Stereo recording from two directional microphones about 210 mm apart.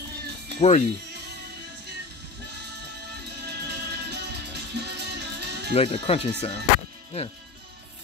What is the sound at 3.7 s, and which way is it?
Music, 50° right (ahead or behind).